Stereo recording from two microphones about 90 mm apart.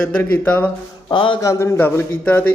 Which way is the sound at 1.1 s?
65° left (ahead or behind).